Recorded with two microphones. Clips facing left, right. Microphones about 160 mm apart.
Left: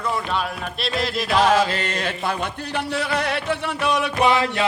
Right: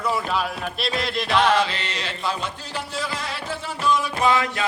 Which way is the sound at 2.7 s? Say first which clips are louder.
Left 7 dB; 65° left (ahead or behind).